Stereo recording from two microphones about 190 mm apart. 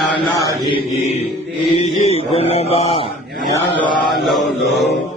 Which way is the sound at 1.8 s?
35° left (ahead or behind).